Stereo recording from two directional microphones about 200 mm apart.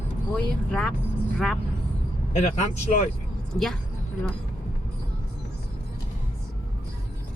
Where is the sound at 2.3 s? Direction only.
35° left (ahead or behind).